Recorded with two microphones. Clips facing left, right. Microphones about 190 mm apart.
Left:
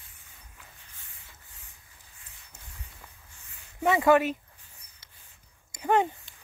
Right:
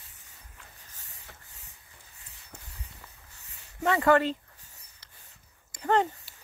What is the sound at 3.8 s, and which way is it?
Speech, 10° left (ahead or behind).